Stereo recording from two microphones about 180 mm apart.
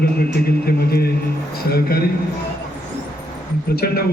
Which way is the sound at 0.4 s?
60° left (ahead or behind).